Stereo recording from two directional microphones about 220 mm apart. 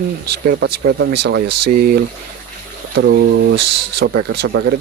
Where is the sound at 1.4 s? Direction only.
90° right.